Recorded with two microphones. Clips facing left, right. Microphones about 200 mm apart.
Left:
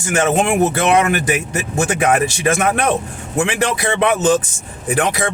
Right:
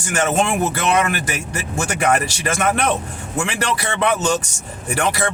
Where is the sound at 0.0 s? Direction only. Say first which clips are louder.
Left 3 dB; 20° left (ahead or behind).